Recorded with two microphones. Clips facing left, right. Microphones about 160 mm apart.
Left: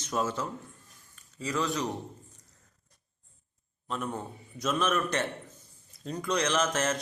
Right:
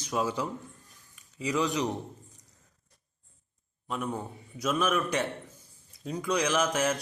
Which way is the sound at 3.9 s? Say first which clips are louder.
Right 1 dB; 10° right (ahead or behind).